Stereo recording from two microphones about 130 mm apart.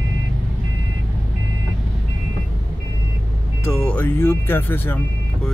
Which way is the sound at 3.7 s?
10° left (ahead or behind).